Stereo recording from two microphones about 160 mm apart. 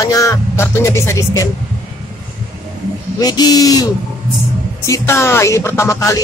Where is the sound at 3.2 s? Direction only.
25° left (ahead or behind).